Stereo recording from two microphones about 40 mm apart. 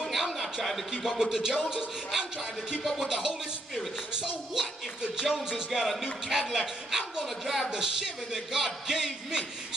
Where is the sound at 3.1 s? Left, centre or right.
Centre.